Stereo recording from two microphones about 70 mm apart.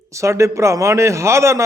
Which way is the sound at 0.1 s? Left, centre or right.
Right.